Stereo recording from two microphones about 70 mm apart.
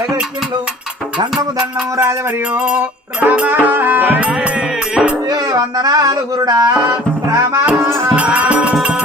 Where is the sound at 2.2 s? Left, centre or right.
Centre.